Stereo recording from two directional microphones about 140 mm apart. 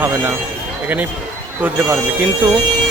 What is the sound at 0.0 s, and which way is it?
Speech, 15° right (ahead or behind).